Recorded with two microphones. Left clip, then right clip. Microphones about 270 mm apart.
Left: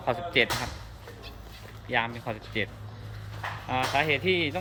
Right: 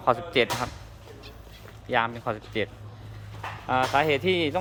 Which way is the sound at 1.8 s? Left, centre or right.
Centre.